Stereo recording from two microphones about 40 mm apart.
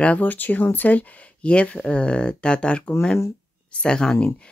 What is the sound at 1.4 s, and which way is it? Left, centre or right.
Speech, left.